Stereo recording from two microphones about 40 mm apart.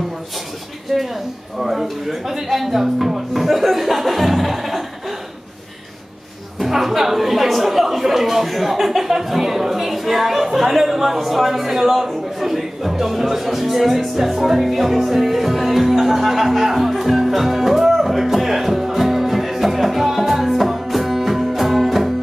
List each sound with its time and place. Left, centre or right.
1.6 s speech: centre
6.6 s a woman's voice: centre